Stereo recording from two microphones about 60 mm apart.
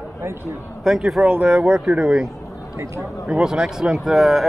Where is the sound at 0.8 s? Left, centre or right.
Centre.